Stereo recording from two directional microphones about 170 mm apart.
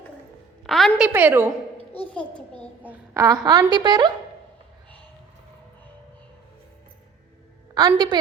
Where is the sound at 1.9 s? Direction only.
5° left (ahead or behind).